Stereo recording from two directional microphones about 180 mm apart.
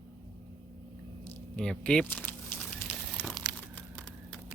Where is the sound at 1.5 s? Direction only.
5° left (ahead or behind).